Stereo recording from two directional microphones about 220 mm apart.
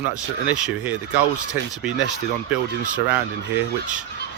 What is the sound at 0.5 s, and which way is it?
Speech, 5° right (ahead or behind).